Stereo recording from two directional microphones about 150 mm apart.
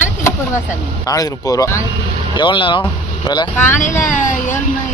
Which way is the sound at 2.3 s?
30° left (ahead or behind).